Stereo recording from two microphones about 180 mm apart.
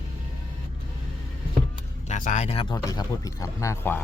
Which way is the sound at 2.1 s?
45° left (ahead or behind).